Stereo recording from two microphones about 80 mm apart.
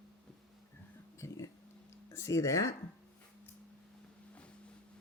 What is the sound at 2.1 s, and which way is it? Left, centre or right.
Speech, left.